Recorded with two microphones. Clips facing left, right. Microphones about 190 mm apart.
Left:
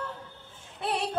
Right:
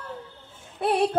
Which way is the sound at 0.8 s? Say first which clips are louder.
Right 8 dB; 50° right (ahead or behind).